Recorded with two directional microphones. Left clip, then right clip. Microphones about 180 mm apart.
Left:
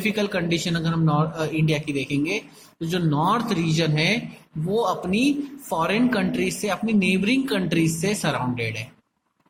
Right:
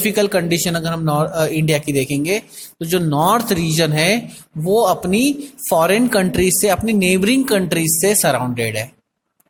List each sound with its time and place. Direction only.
0.0 s speech: 55° right (ahead or behind)